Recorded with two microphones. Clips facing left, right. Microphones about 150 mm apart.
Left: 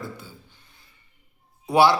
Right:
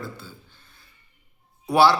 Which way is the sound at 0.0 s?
15° left (ahead or behind).